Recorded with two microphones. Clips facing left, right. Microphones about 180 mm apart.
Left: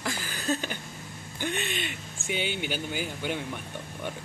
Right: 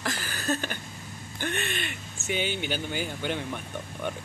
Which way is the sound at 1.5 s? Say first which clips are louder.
Even; 55° right (ahead or behind).